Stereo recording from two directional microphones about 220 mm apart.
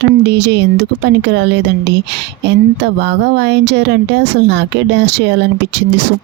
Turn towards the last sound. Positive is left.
turn(degrees=-50)  # may be behind; listen again after turning